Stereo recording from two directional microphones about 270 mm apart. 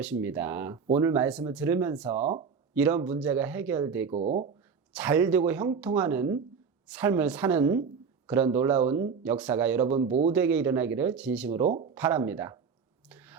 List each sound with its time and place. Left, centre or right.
0.0 s speech: centre
2.2 s speech: right
2.7 s speech: centre
4.1 s speech: right
4.9 s speech: centre
9.9 s speech: right
10.3 s speech: centre
11.6 s speech: right
11.9 s speech: centre
13.1 s a sound: centre